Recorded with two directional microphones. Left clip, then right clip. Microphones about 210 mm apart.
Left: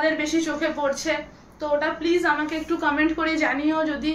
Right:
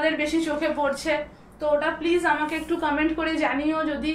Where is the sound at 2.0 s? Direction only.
15° left (ahead or behind).